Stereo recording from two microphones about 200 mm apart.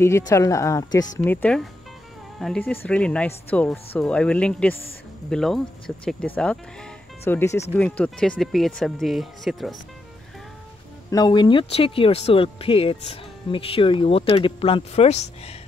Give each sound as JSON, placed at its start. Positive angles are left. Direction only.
{"t": 0.0, "sound": "a woman's voice", "side_deg": 15}
{"t": 11.1, "sound": "speech", "side_deg": 20}